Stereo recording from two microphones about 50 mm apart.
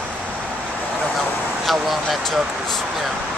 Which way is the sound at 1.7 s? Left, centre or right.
Centre.